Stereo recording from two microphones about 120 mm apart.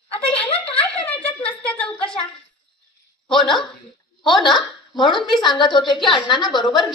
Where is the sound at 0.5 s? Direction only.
10° left (ahead or behind).